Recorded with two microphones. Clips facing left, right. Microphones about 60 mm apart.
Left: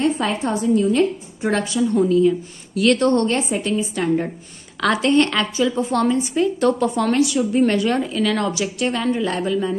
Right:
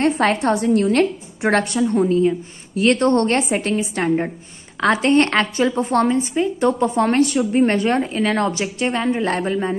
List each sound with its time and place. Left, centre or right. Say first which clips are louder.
0.0 s a woman's voice: right 3 dB; right
4.7 s a woman's voice: right 1 dB; right
6.0 s a woman's voice: even; right
9.2 s a woman's voice: right 1 dB; right